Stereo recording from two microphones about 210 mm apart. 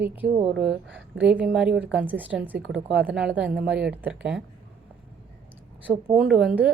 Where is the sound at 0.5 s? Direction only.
55° right (ahead or behind).